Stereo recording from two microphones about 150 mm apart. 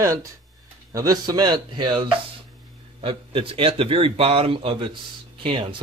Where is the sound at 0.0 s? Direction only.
20° right (ahead or behind).